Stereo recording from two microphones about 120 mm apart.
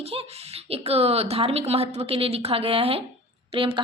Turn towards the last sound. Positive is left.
turn(degrees=-50)  # may be behind; listen again after turning